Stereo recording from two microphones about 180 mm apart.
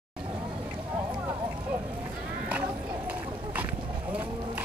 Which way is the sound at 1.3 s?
25° right (ahead or behind).